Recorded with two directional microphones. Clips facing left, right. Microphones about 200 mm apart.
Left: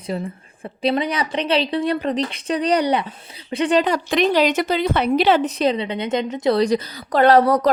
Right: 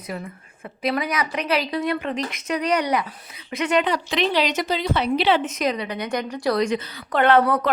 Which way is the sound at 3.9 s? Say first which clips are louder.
Left 4 dB; 45° left (ahead or behind).